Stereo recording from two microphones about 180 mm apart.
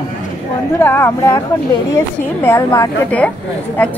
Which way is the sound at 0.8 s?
10° left (ahead or behind).